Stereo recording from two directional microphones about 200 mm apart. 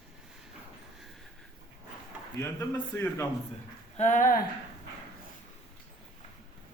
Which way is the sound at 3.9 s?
35° left (ahead or behind).